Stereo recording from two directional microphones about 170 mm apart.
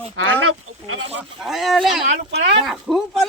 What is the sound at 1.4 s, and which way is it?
Speech, centre (ahead or behind).